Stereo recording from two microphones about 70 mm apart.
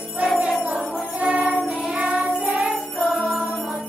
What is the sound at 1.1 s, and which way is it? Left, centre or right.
Music, centre.